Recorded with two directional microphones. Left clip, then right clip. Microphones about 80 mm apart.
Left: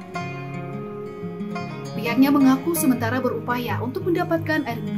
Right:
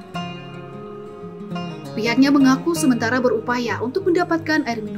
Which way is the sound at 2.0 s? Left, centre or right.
Right.